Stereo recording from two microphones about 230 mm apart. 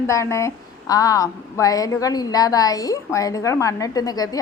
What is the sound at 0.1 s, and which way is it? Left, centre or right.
A woman's voice, centre.